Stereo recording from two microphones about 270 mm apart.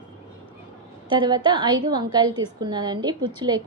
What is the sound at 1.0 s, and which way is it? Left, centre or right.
A woman's voice, centre.